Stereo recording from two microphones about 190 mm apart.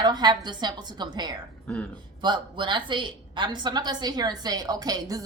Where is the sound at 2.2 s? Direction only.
25° right (ahead or behind).